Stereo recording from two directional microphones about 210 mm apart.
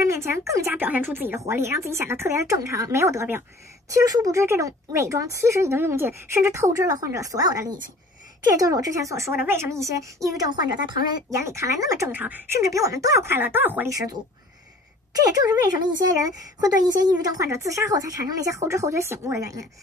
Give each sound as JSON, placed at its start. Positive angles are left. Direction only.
{"t": 0.0, "sound": "speech", "side_deg": -10}
{"t": 15.1, "sound": "speech", "side_deg": -20}
{"t": 17.2, "sound": "speech", "side_deg": -15}